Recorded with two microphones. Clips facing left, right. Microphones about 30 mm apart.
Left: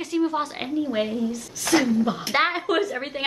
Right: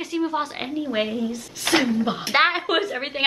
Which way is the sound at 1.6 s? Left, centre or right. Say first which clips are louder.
Even; right.